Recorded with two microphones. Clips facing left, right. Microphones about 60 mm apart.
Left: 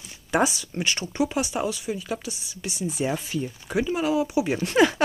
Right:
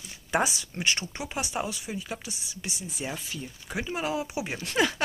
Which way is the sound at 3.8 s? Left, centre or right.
Right.